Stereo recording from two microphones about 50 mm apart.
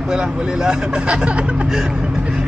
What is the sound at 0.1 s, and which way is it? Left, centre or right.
Speech, centre.